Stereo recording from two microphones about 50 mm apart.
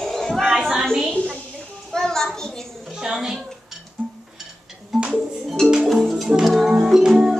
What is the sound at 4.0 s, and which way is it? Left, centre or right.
Music, right.